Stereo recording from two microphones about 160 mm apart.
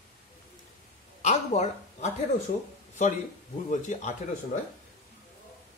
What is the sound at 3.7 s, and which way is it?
Speech, 50° left (ahead or behind).